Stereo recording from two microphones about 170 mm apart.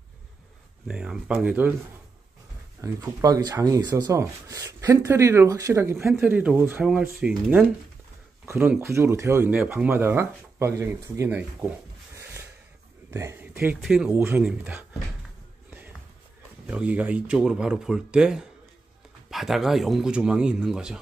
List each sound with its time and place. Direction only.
0.8 s speech: 5° right (ahead or behind)
2.8 s speech: 20° right (ahead or behind)
13.1 s speech: 15° right (ahead or behind)
13.8 s speech: 5° right (ahead or behind)
16.6 s speech: 5° right (ahead or behind)